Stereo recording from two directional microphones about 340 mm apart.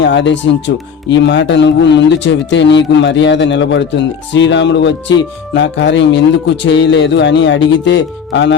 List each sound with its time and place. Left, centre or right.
0.0 s speech: left